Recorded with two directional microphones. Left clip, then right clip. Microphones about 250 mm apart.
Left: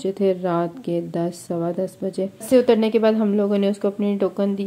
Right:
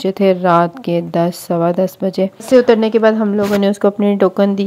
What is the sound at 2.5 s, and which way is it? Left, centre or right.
Speech, centre.